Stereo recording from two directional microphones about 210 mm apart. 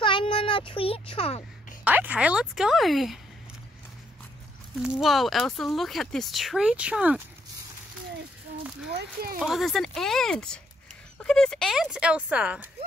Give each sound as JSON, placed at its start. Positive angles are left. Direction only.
{"t": 0.0, "sound": "baby cry", "side_deg": 25}
{"t": 1.9, "sound": "speech", "side_deg": -5}
{"t": 4.9, "sound": "speech", "side_deg": 0}
{"t": 8.9, "sound": "speech", "side_deg": -45}
{"t": 9.4, "sound": "speech", "side_deg": 0}